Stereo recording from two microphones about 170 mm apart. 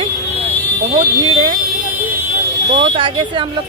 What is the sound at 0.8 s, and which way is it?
Speech, 40° right (ahead or behind).